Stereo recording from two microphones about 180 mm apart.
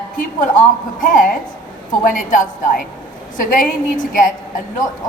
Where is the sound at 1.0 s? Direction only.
45° left (ahead or behind).